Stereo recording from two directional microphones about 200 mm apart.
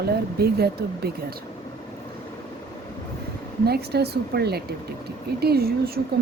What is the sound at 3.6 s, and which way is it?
Speech, 50° right (ahead or behind).